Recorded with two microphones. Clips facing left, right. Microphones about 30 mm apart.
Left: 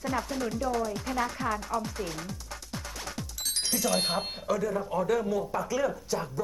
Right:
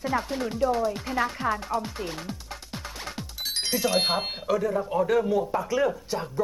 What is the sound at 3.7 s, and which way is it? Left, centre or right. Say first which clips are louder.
Speech: right 4 dB; right.